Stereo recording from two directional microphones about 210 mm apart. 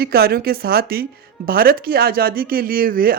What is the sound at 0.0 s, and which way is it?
Speech, 50° right (ahead or behind).